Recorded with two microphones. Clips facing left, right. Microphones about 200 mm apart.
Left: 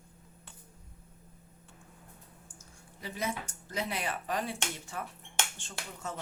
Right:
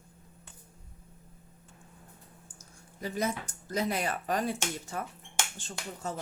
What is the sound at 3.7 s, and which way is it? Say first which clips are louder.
Speech: right 5 dB; 40° right (ahead or behind).